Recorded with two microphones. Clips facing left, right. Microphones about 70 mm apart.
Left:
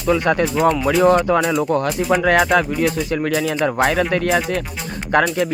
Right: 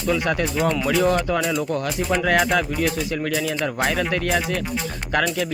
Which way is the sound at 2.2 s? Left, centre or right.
Left.